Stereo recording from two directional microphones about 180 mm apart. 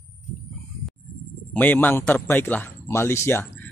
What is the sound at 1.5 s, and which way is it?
Speech, 10° left (ahead or behind).